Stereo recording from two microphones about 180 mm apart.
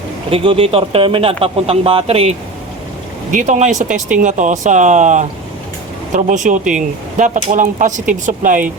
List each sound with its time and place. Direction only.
0.3 s speech: 30° right (ahead or behind)
3.3 s speech: 45° right (ahead or behind)